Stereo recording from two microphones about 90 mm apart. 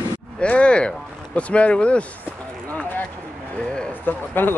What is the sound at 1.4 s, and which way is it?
Speech, 15° left (ahead or behind).